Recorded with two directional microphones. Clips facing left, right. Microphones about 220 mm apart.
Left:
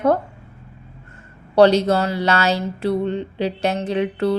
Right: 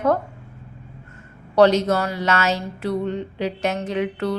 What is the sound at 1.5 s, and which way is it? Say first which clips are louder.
Speech: left 2 dB; 30° left (ahead or behind).